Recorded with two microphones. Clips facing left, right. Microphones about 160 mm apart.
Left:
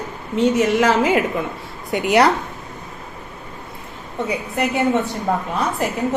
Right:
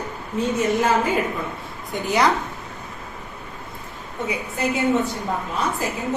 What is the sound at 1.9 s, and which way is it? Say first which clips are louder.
Speech: left 5 dB; 75° left (ahead or behind).